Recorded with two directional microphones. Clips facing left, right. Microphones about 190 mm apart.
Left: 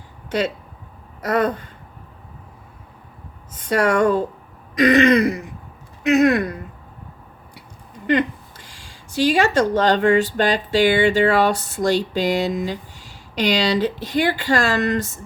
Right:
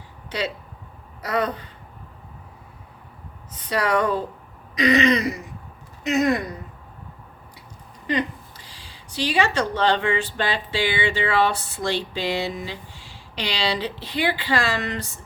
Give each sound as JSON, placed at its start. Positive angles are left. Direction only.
{"t": 0.3, "sound": "speech", "side_deg": 50}
{"t": 3.6, "sound": "speech", "side_deg": 50}
{"t": 8.0, "sound": "speech", "side_deg": 55}